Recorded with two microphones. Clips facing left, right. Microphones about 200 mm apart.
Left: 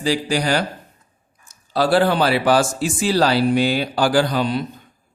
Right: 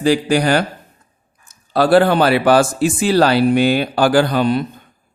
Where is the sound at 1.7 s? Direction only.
55° right (ahead or behind).